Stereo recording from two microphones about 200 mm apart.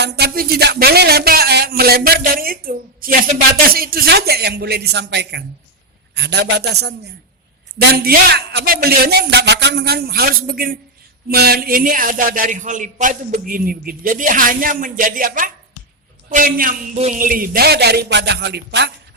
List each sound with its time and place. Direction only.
0.0 s a man's voice: 50° right (ahead or behind)